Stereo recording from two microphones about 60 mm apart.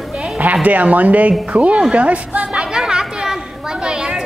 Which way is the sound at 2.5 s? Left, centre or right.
Centre.